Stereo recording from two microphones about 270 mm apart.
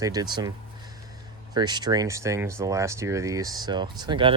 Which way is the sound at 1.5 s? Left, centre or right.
Centre.